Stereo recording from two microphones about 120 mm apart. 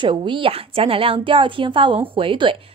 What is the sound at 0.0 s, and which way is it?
A woman's voice, 40° right (ahead or behind).